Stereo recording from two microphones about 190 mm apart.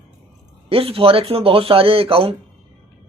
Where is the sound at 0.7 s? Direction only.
30° right (ahead or behind).